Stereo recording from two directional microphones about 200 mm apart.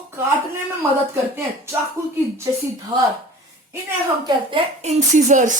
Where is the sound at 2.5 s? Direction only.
15° right (ahead or behind).